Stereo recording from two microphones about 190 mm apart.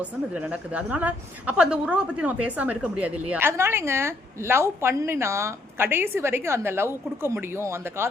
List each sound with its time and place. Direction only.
0.0 s a woman's voice: 5° right (ahead or behind)